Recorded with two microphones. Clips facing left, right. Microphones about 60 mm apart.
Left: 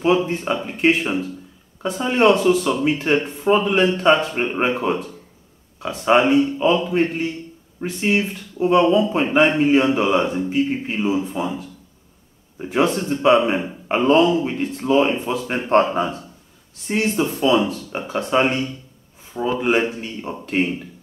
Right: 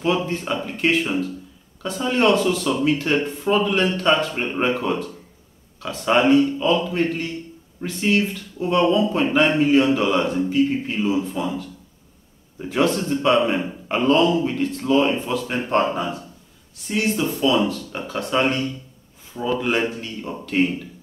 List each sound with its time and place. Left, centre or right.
0.0 s speech: centre